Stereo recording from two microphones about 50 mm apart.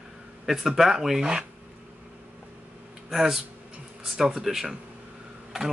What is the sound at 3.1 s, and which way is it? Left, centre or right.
Speech, centre.